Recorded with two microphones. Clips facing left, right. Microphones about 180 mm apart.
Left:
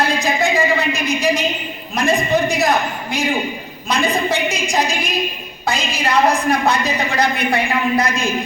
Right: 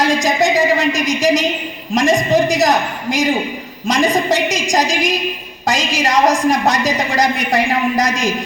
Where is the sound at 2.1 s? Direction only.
40° right (ahead or behind).